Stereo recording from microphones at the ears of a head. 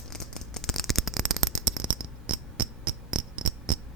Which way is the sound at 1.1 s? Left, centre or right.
Right.